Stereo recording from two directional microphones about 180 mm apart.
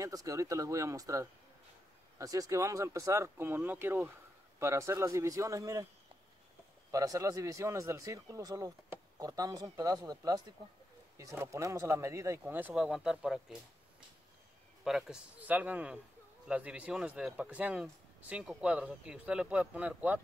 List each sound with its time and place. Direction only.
0.0 s speech: 20° right (ahead or behind)
6.9 s speech: 20° right (ahead or behind); by 13.6 s 5° right (ahead or behind)
14.9 s speech: centre (ahead or behind)